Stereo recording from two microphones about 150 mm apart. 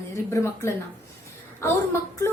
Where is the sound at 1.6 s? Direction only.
15° left (ahead or behind).